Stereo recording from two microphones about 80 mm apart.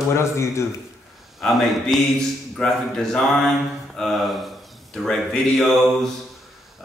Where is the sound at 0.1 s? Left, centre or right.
Left.